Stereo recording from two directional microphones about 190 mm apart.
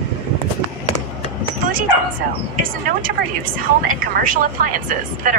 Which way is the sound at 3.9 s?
45° right (ahead or behind).